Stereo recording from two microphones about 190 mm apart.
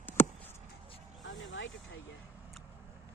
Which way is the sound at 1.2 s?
80° left.